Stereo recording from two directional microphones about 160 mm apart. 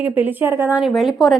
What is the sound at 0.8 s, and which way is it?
Speech, centre (ahead or behind).